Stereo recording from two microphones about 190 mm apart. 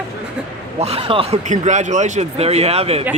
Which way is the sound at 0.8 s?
30° right (ahead or behind).